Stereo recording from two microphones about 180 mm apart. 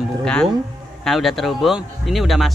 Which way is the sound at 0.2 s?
5° left (ahead or behind).